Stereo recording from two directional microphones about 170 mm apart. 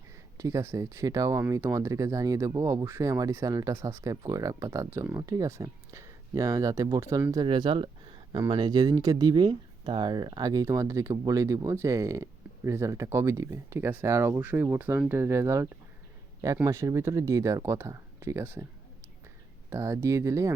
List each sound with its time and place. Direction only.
0.3 s speech: 20° right (ahead or behind)
19.7 s speech: 15° right (ahead or behind)